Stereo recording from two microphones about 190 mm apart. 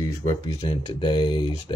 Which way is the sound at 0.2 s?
35° left (ahead or behind).